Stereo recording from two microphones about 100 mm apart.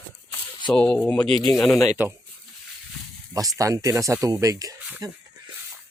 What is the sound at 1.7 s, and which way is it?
Speech, 35° left (ahead or behind).